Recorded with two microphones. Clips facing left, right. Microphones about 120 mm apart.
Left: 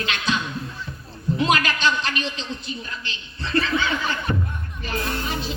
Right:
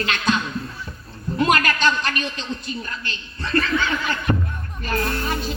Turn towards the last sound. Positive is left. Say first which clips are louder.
# right 2 dB
turn(degrees=-50)  # may be behind; listen again after turning